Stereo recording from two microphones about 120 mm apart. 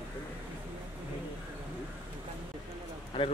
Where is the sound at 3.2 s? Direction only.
50° left (ahead or behind).